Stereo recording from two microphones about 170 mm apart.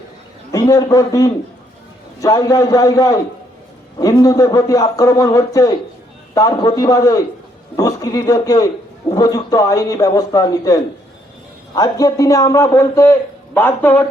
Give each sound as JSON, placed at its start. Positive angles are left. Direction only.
{"t": 0.5, "sound": "a man's voice", "side_deg": 20}